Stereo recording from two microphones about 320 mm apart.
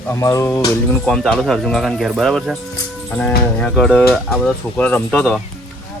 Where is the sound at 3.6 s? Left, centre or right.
Centre.